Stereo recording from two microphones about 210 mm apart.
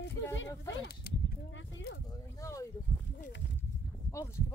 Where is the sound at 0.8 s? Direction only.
50° left (ahead or behind).